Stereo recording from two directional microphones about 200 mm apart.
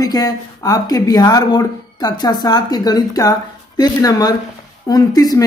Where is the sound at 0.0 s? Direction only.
20° left (ahead or behind).